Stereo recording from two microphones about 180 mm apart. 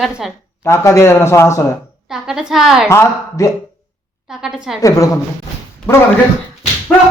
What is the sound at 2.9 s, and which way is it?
Speech, 15° left (ahead or behind).